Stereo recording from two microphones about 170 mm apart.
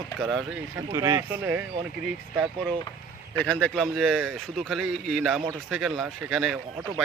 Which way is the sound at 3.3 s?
10° left (ahead or behind).